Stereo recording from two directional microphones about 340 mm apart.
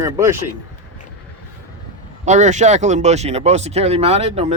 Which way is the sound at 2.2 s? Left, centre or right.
Right.